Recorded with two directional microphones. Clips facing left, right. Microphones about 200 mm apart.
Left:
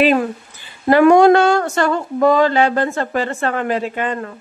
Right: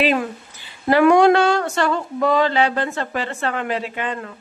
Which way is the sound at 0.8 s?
45° left (ahead or behind).